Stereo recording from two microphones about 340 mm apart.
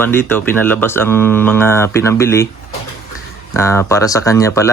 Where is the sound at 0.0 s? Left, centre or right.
Centre.